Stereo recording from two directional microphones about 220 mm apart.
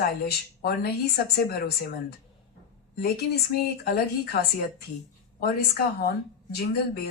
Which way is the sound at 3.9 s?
45° left (ahead or behind).